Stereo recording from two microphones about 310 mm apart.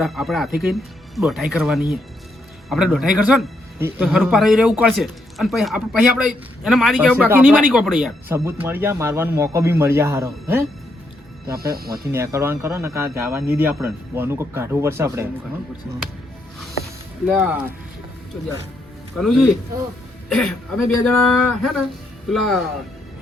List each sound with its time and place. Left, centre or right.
0.0 s a man's voice: centre
11.5 s speech: right
12.1 s speech: centre
17.2 s a man's voice: centre
19.1 s a man's voice: centre